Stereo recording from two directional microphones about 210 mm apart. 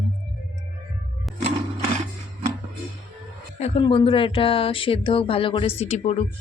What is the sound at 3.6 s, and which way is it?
Speech, 30° left (ahead or behind).